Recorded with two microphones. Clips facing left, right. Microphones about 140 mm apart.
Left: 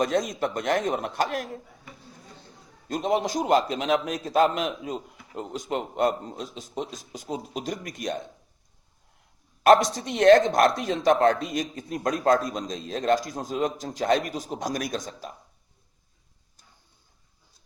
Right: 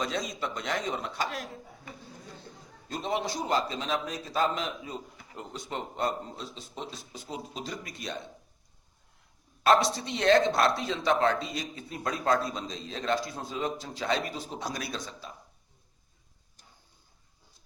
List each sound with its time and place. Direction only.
0.0 s a man's voice: 50° left (ahead or behind)
2.9 s a man's voice: 45° left (ahead or behind)
3.7 s a man's voice: 70° left (ahead or behind)
4.2 s a man's voice: 50° left (ahead or behind)
4.6 s speech: 20° left (ahead or behind)
5.4 s a man's voice: 45° left (ahead or behind)
9.6 s a man's voice: 45° left (ahead or behind)